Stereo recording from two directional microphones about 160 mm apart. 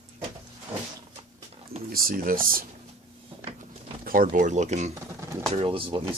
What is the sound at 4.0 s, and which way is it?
Speech, 60° right (ahead or behind).